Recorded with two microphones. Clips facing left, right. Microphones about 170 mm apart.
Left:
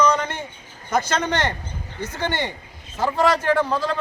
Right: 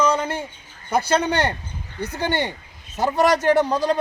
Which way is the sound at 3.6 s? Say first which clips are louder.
Right 2 dB; 15° right (ahead or behind).